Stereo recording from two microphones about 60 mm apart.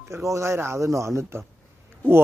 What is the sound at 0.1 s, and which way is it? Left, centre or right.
Speech, right.